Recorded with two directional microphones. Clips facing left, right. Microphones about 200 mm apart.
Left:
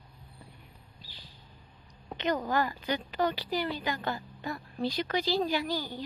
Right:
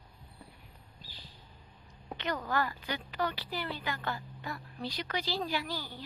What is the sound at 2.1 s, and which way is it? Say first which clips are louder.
A woman's voice: left 4 dB; 20° left (ahead or behind).